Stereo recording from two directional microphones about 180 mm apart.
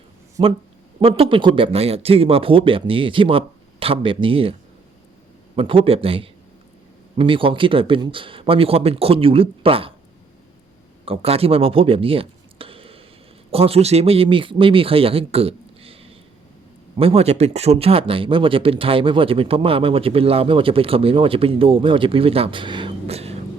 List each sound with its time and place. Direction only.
0.4 s speech: 25° right (ahead or behind)
5.5 s speech: 30° right (ahead or behind)
11.0 s speech: 30° right (ahead or behind)